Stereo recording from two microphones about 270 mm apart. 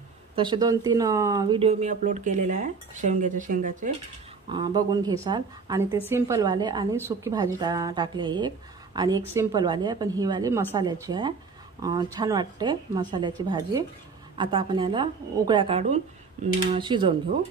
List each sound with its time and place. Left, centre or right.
0.4 s speech: centre
4.5 s a woman's voice: centre